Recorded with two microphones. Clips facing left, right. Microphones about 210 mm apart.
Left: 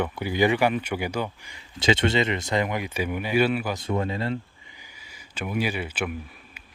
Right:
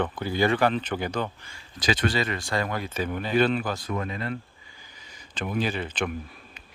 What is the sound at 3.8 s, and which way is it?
Speech, 25° left (ahead or behind).